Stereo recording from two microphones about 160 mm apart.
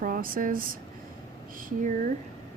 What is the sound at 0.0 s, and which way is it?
Speech, 60° right (ahead or behind).